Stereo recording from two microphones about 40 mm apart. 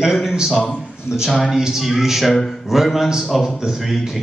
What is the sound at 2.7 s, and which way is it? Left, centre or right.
Speech, centre.